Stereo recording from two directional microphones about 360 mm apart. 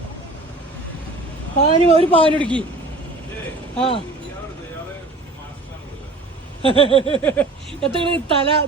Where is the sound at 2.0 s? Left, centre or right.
Centre.